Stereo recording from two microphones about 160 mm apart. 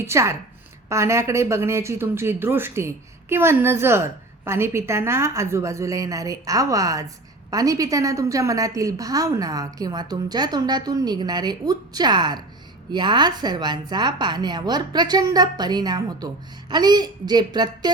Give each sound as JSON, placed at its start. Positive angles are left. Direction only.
{"t": 0.0, "sound": "a woman's voice", "side_deg": -15}